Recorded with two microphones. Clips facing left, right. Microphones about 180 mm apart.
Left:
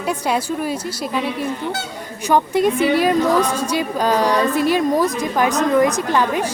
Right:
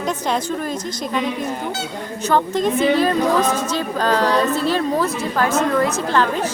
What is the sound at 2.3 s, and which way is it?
Speech, 10° left (ahead or behind).